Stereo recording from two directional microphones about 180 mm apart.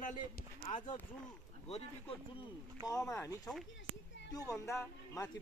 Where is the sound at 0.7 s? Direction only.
40° left (ahead or behind).